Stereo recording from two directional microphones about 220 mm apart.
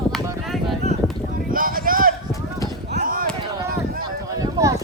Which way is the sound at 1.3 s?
40° right (ahead or behind).